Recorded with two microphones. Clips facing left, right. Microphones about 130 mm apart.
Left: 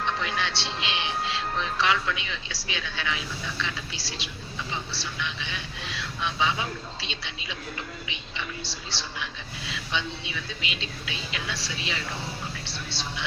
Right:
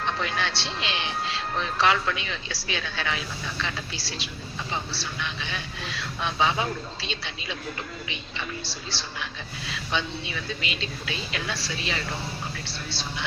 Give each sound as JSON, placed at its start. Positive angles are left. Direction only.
{"t": 0.2, "sound": "a woman's voice", "side_deg": -40}